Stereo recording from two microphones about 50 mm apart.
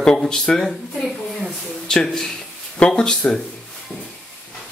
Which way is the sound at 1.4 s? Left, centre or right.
Centre.